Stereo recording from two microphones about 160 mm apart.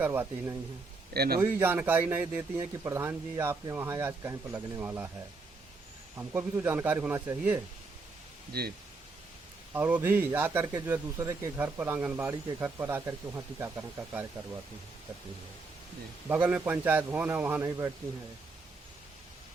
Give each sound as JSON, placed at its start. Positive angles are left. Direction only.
{"t": 0.0, "sound": "speech", "side_deg": -15}
{"t": 1.1, "sound": "a man's voice", "side_deg": -75}
{"t": 1.4, "sound": "speech", "side_deg": -15}
{"t": 6.1, "sound": "speech", "side_deg": -15}
{"t": 9.7, "sound": "speech", "side_deg": -10}
{"t": 16.3, "sound": "speech", "side_deg": -10}